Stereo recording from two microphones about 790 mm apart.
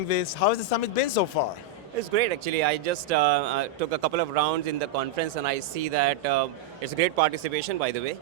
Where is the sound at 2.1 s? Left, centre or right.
Right.